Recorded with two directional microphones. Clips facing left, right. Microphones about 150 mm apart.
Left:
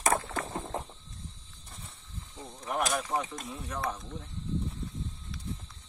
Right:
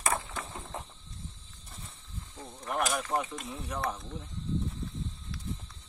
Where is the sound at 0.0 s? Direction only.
45° left (ahead or behind).